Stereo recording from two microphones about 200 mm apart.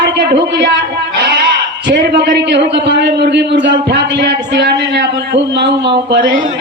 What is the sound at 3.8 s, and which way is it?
A man's voice, 60° right (ahead or behind).